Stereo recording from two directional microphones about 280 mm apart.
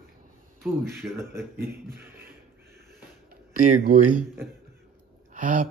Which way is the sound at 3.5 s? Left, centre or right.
Right.